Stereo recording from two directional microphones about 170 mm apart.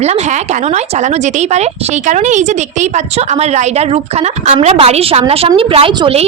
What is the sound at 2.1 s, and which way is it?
A woman's voice, 45° right (ahead or behind).